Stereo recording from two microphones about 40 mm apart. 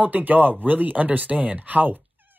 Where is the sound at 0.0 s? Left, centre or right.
Right.